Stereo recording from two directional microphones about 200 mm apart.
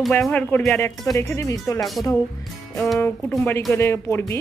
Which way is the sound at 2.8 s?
Centre (ahead or behind).